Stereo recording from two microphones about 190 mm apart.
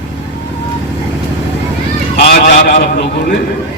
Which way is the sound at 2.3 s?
50° left (ahead or behind).